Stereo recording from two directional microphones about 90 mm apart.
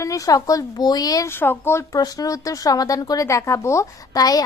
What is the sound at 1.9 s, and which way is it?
A woman's voice, 45° left (ahead or behind).